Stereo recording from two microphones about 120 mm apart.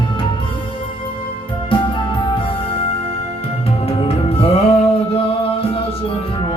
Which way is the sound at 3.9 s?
55° left (ahead or behind).